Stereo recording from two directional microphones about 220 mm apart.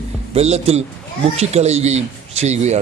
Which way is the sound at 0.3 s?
30° right (ahead or behind).